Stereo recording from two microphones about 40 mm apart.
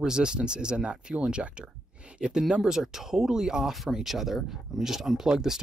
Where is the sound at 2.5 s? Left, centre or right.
Centre.